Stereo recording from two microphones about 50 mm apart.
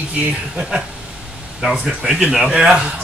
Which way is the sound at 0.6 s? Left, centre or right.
Centre.